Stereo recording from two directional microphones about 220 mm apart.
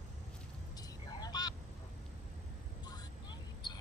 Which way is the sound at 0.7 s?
15° left (ahead or behind).